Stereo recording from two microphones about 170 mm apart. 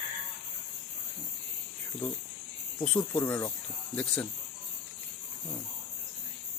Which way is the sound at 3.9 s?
5° left (ahead or behind).